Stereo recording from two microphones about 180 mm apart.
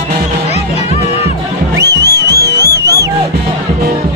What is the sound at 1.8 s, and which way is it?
Music, 20° right (ahead or behind).